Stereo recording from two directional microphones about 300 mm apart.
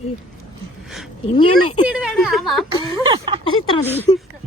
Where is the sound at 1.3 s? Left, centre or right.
Centre.